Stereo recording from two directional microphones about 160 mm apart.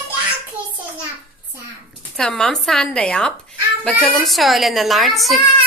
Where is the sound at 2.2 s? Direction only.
5° left (ahead or behind).